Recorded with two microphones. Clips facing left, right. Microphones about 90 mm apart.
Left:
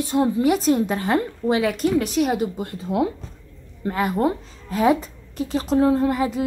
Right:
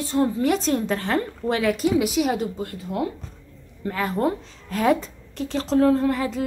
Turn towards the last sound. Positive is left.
turn(degrees=10)  # may be behind; listen again after turning